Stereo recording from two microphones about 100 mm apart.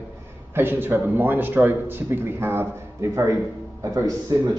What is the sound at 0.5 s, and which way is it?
A man's voice, 20° right (ahead or behind).